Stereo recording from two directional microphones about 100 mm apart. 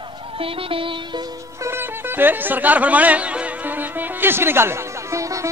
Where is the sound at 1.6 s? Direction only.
20° right (ahead or behind).